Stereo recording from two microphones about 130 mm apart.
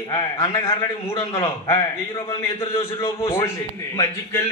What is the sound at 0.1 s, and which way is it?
A man's voice, 20° left (ahead or behind).